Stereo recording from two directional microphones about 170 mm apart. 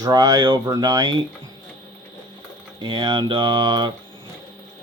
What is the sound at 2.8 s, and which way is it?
Speech, 25° right (ahead or behind).